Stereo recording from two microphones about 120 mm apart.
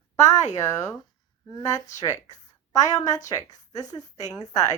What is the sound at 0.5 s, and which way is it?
A woman's voice, 25° left (ahead or behind).